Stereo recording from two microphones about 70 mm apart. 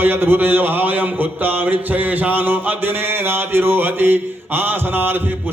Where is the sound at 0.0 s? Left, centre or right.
Right.